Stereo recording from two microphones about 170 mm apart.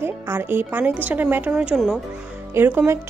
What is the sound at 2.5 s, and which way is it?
Speech, 15° right (ahead or behind).